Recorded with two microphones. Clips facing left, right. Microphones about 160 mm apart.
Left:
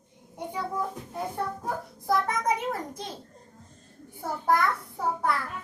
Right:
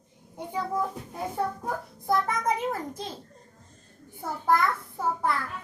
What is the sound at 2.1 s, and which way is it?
A child's voice, centre (ahead or behind).